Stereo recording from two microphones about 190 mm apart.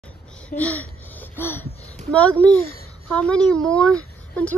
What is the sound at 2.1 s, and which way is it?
A woman's voice, 5° left (ahead or behind).